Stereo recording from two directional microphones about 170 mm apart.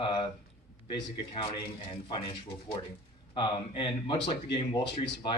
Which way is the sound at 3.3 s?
30° left (ahead or behind).